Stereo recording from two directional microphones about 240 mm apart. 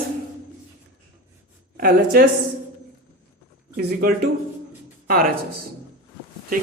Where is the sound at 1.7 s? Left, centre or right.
Right.